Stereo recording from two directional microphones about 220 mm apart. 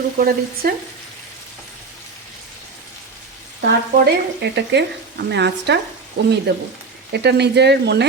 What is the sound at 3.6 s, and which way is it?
Speech, 50° right (ahead or behind).